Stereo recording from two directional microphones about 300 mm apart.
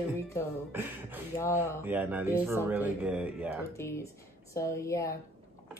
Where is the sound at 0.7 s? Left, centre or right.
Centre.